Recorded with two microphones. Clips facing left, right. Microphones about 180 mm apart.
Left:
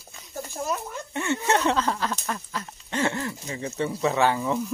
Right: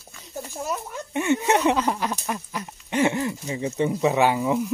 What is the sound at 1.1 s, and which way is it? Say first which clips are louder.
Speech: right 4 dB; 15° right (ahead or behind).